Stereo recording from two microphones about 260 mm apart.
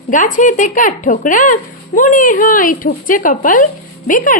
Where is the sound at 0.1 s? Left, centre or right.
Left.